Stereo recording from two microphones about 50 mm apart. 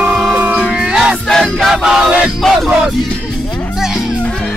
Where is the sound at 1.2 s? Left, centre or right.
Centre.